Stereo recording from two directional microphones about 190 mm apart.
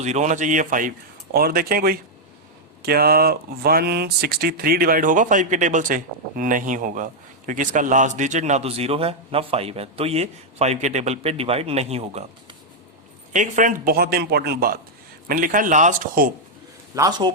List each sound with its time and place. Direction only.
0.0 s speech: 40° right (ahead or behind)
16.9 s a man's voice: 20° right (ahead or behind)